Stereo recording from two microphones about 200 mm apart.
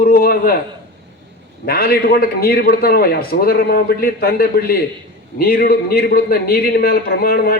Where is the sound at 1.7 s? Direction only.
50° left (ahead or behind).